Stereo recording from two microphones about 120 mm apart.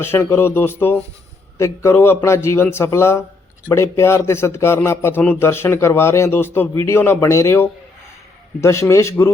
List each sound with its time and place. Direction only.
0.0 s a man's voice: 20° left (ahead or behind)